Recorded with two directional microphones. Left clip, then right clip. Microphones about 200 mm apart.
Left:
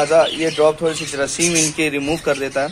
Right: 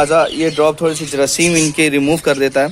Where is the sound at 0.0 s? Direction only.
50° right (ahead or behind).